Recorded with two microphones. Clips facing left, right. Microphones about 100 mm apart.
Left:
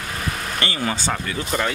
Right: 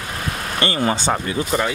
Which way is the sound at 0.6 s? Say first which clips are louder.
Right 7 dB; 30° right (ahead or behind).